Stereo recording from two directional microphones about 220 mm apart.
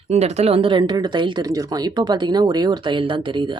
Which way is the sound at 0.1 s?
30° right (ahead or behind).